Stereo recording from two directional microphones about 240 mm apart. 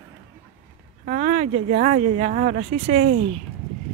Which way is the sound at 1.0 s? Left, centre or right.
Right.